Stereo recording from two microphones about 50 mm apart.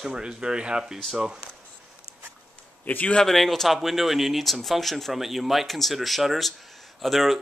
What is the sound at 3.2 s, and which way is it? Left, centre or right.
Speech, centre.